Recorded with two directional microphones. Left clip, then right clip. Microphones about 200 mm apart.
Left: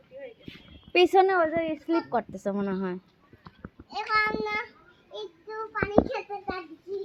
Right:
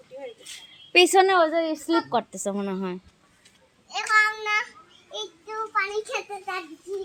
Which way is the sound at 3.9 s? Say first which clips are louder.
Right 5 dB; 15° right (ahead or behind).